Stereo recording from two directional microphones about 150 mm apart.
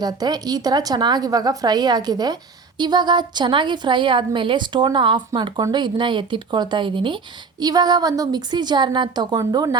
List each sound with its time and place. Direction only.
0.0 s a woman's voice: 25° right (ahead or behind)